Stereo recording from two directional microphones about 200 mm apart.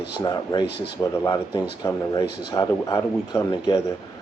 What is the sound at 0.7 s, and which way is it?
Speech, 55° left (ahead or behind).